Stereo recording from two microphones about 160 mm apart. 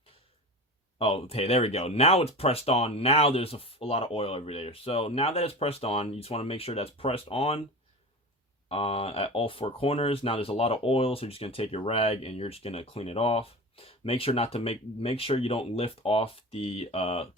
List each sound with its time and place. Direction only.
0.9 s speech: 35° left (ahead or behind)
8.7 s speech: 35° left (ahead or behind)